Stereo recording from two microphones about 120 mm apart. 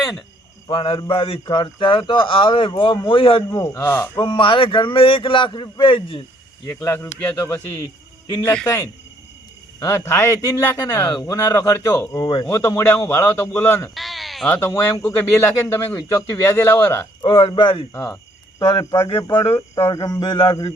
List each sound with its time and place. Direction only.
0.7 s speech: 45° left (ahead or behind)
3.5 s speech: 25° left (ahead or behind)
4.2 s speech: 45° left (ahead or behind)
6.7 s speech: 20° left (ahead or behind); by 12.5 s 40° left (ahead or behind)
12.5 s speech: 25° left (ahead or behind)
13.9 s bleat: centre (ahead or behind)
14.4 s speech: 15° left (ahead or behind)
17.2 s speech: 40° left (ahead or behind)
19.7 s speech: 30° left (ahead or behind)